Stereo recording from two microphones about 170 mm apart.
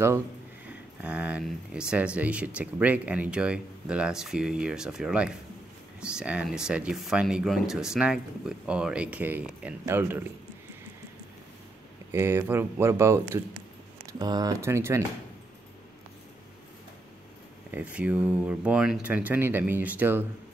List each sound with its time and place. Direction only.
0.7 s speech: 5° right (ahead or behind)
12.1 s speech: 15° right (ahead or behind)
17.6 s speech: 10° right (ahead or behind)